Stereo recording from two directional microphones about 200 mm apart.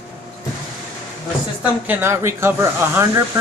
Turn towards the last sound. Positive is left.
turn(degrees=-10)  # may be behind; listen again after turning